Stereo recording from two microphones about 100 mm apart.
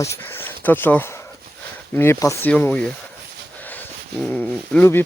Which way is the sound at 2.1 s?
30° left (ahead or behind).